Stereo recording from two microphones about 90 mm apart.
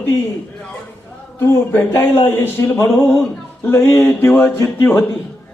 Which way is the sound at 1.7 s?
25° left (ahead or behind).